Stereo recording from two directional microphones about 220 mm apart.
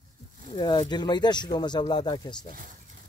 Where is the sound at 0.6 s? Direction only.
20° left (ahead or behind).